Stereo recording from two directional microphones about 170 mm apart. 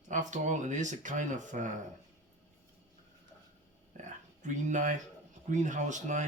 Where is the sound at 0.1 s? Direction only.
45° right (ahead or behind).